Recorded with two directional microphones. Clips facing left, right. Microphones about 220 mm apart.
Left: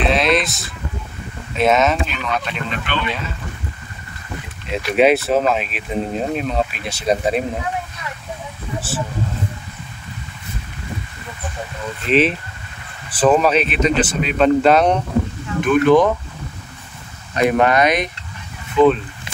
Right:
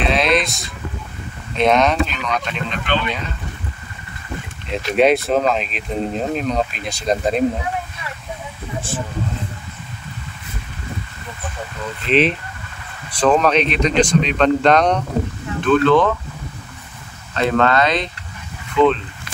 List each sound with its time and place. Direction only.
0.0 s a sound: centre (ahead or behind)
1.5 s speech: 5° left (ahead or behind)
4.6 s speech: centre (ahead or behind)
8.9 s speech: 5° left (ahead or behind)
12.1 s speech: centre (ahead or behind)
17.3 s speech: 15° left (ahead or behind)